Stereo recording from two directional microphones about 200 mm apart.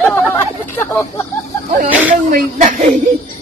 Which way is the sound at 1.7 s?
40° right (ahead or behind).